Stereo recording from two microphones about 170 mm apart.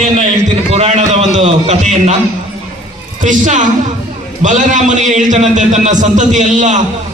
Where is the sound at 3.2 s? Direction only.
45° right (ahead or behind).